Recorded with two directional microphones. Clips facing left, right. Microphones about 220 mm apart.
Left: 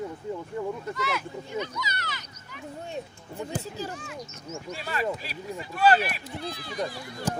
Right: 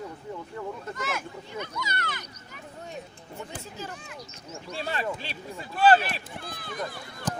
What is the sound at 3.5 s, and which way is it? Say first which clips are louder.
Speech: left 8 dB; 35° left (ahead or behind).